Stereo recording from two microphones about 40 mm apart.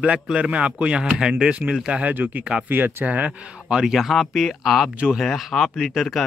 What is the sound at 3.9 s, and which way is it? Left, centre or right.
Speech, centre.